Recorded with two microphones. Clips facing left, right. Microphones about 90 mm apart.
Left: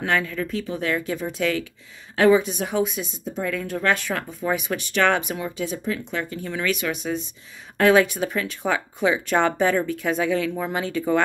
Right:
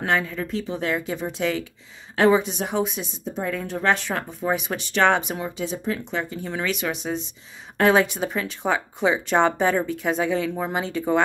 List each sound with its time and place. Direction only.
0.0 s a woman's voice: 30° right (ahead or behind)